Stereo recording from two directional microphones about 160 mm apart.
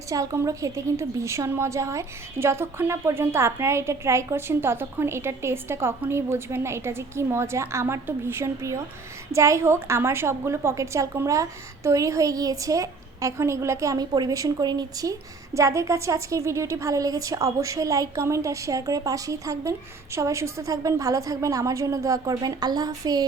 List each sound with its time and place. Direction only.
0.1 s a woman's voice: 20° right (ahead or behind)